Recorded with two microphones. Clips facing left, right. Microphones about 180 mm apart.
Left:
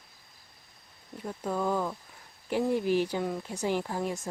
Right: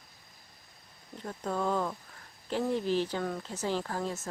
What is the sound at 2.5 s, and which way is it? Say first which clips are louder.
Speech: left 3 dB; 10° left (ahead or behind).